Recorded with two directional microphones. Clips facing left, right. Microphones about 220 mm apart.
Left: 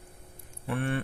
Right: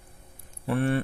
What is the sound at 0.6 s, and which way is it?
Speech, 40° right (ahead or behind).